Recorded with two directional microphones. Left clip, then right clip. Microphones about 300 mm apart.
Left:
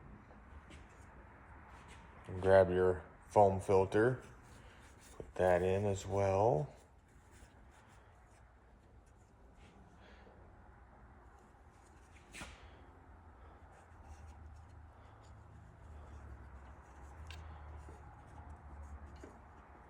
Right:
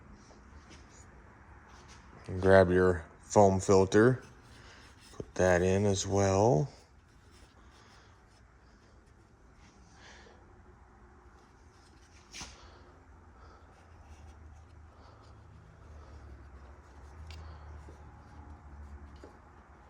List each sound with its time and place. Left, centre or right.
2.4 s speech: right
5.1 s speech: right